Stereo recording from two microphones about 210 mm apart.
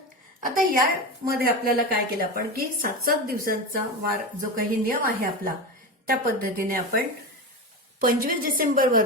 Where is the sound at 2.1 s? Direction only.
45° right (ahead or behind).